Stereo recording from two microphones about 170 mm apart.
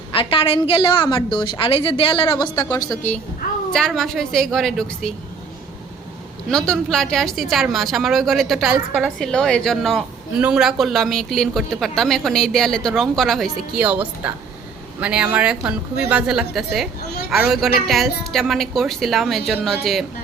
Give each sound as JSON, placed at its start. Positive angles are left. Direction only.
{"t": 0.1, "sound": "a woman's voice", "side_deg": 30}
{"t": 3.7, "sound": "a woman's voice", "side_deg": 5}
{"t": 6.5, "sound": "a woman's voice", "side_deg": 5}